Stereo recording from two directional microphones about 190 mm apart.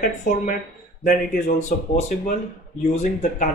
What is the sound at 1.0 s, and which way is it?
Speech, 40° left (ahead or behind).